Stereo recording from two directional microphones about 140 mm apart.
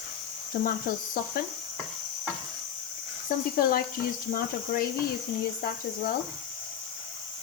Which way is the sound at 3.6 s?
90° left.